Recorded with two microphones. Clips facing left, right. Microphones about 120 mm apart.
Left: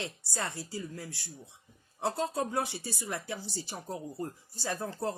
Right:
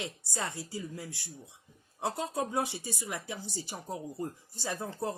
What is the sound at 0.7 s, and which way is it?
Speech, 15° right (ahead or behind).